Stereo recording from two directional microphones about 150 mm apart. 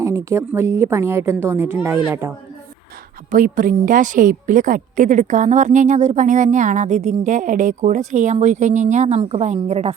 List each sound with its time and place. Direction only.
0.0 s a woman's voice: 20° right (ahead or behind)
3.2 s a woman's voice: 65° right (ahead or behind); by 9.9 s 45° right (ahead or behind)